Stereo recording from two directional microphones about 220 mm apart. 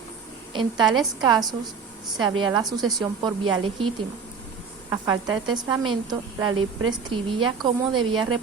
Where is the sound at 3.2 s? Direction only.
25° right (ahead or behind).